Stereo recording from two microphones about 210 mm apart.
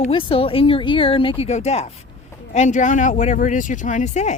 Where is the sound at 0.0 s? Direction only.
25° left (ahead or behind).